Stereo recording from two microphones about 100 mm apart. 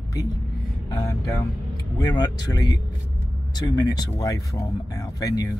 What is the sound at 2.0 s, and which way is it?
Speech, 45° left (ahead or behind).